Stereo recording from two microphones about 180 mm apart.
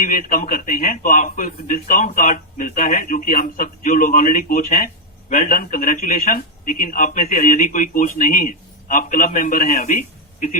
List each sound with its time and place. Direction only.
0.0 s a man's voice: 50° left (ahead or behind)